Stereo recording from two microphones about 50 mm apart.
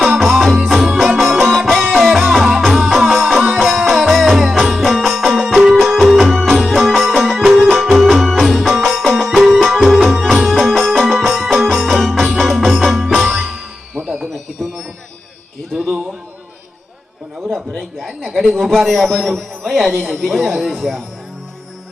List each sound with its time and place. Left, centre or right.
0.1 s music: centre
14.0 s music: right
15.7 s a sound: centre
18.3 s a man's voice: centre